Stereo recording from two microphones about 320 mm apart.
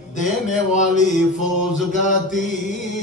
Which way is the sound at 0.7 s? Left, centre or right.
Left.